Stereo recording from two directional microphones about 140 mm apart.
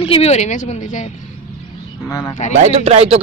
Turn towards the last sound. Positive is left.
turn(degrees=-45)  # may be behind; listen again after turning